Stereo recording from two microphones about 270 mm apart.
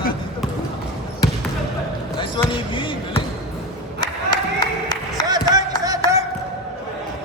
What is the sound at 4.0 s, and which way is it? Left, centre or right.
Clapping, centre.